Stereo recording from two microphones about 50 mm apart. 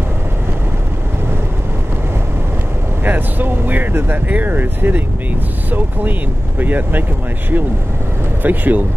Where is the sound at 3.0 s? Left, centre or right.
Right.